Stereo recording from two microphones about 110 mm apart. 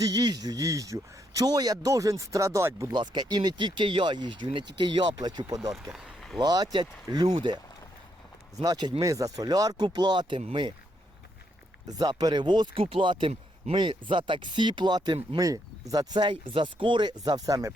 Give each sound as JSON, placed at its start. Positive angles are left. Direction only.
{"t": 0.0, "sound": "speech", "side_deg": -35}
{"t": 2.9, "sound": "speech", "side_deg": -40}
{"t": 5.7, "sound": "speech", "side_deg": -5}
{"t": 6.4, "sound": "speech", "side_deg": -35}
{"t": 8.6, "sound": "speech", "side_deg": -40}
{"t": 11.9, "sound": "speech", "side_deg": -40}